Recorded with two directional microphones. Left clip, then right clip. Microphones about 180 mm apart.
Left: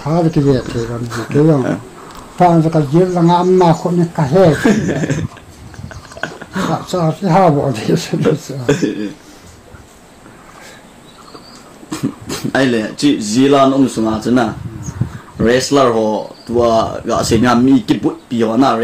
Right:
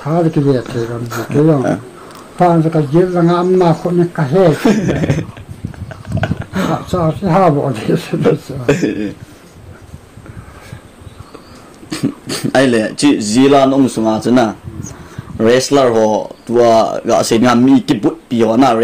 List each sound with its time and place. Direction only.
0.0 s a man's voice: 25° left (ahead or behind)
0.7 s speech: centre (ahead or behind)
2.3 s a man's voice: 25° left (ahead or behind)
4.6 s speech: centre (ahead or behind)
6.2 s a sound: 10° right (ahead or behind)
6.9 s speech: 15° left (ahead or behind)
8.6 s speech: 10° right (ahead or behind)
11.9 s speech: 10° right (ahead or behind)